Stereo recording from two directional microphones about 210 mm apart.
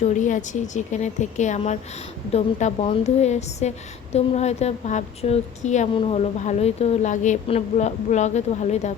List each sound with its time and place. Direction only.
0.0 s a woman's voice: 35° left (ahead or behind)